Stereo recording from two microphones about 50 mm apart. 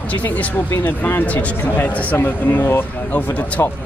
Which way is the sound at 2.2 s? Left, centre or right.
Left.